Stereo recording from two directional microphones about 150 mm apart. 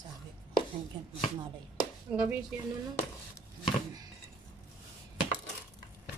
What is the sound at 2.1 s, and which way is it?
Speech, 10° right (ahead or behind).